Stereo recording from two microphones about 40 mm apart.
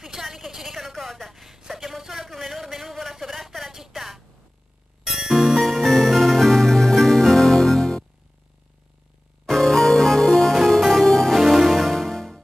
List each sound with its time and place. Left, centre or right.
0.1 s a sound: centre
5.0 s music: centre
9.5 s music: centre
11.3 s music: centre